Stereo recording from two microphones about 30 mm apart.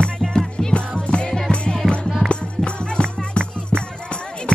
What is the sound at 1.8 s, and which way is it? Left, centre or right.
Music, right.